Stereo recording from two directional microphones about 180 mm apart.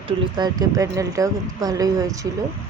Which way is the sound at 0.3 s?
20° right (ahead or behind).